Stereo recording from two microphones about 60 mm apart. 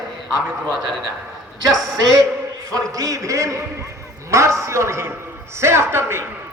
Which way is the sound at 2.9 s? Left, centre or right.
Right.